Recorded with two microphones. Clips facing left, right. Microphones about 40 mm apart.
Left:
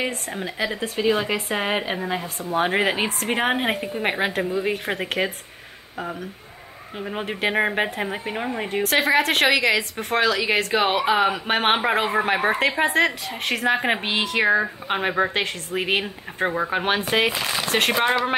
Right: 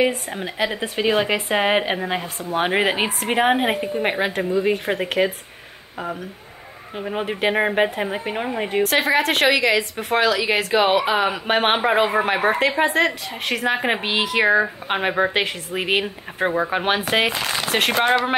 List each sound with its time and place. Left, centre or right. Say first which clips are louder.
0.0 s a woman's voice: right 6 dB; centre
0.6 s speech: right 3 dB; right
2.8 s a woman's voice: right 2 dB; centre
7.0 s a woman's voice: right 3 dB; centre
8.8 s a woman's voice: left 1 dB; centre
17.3 s speech: right 1 dB; right
17.6 s a woman's voice: even; centre